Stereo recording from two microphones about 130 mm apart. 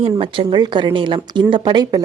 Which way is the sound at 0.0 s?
40° right (ahead or behind).